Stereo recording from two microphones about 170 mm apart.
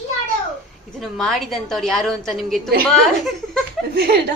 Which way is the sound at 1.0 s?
Centre (ahead or behind).